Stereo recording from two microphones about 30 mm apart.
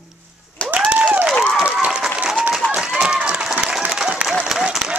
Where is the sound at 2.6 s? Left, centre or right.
Left.